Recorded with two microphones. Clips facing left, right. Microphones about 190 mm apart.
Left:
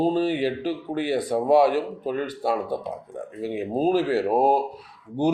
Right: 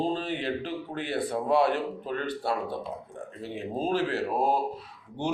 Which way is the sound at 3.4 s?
10° left (ahead or behind).